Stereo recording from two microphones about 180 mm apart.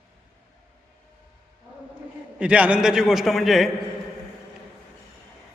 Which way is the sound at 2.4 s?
10° right (ahead or behind).